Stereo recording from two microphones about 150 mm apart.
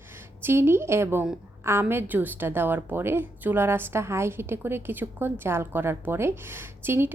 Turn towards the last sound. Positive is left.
turn(degrees=-15)  # may be behind; listen again after turning